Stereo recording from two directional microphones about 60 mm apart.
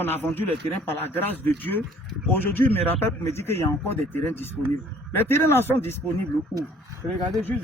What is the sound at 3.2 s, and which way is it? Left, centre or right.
Speech, left.